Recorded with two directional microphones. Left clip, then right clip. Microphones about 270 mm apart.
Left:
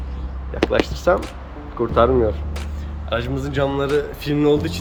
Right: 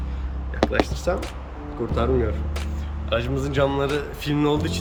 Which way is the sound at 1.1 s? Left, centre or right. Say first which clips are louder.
Left 12 dB; left.